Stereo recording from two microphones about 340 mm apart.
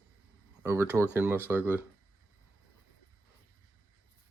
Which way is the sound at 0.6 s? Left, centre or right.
Centre.